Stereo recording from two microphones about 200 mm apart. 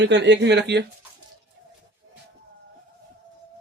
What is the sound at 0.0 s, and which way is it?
Speech, 60° right (ahead or behind).